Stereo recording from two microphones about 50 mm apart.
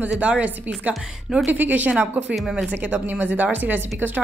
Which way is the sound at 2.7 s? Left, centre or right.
Right.